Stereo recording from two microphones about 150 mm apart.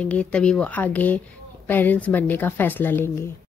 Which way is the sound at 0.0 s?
10° left (ahead or behind).